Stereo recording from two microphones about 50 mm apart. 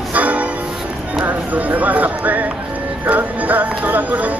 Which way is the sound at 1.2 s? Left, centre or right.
Right.